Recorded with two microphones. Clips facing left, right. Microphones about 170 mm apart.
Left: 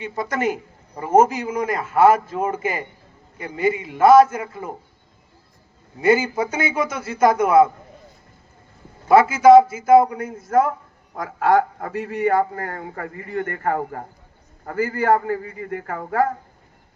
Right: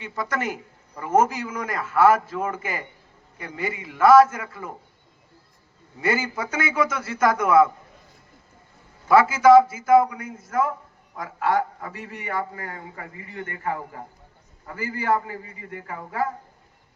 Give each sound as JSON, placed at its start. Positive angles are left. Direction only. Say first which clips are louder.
{"t": 0.0, "sound": "a man's voice", "louder": "left 5 dB", "side_deg": 20}
{"t": 6.0, "sound": "a man's voice", "louder": "left 7 dB", "side_deg": 20}
{"t": 9.0, "sound": "a man's voice", "louder": "left 3 dB", "side_deg": 20}